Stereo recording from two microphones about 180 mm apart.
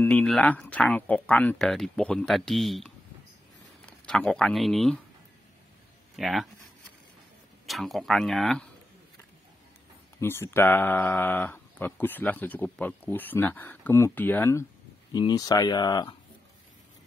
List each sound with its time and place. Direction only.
0.0 s speech: 5° left (ahead or behind)
4.0 s speech: 5° left (ahead or behind)
6.1 s speech: centre (ahead or behind)
7.6 s speech: centre (ahead or behind)
10.1 s speech: 15° left (ahead or behind)